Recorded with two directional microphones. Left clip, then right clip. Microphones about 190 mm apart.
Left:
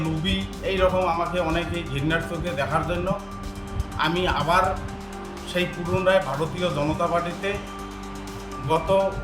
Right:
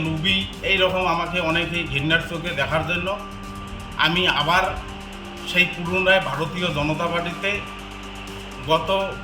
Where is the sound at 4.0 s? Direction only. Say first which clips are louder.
Right 4 dB; 10° left (ahead or behind).